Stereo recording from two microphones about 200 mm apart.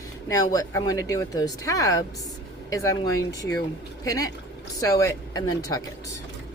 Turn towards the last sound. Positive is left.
turn(degrees=15)  # may be behind; listen again after turning